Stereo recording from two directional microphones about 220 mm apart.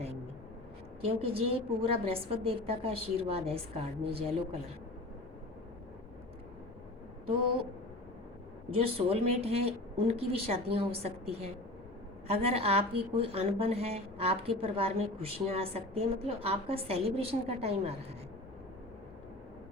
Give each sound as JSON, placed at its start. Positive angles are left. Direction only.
{"t": 1.0, "sound": "a woman's voice", "side_deg": -25}
{"t": 8.7, "sound": "a woman's voice", "side_deg": -25}